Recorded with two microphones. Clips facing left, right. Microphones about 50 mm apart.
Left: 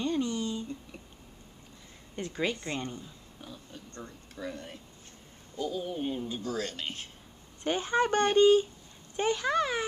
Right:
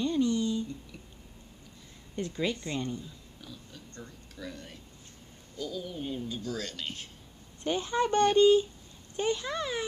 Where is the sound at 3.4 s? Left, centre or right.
Left.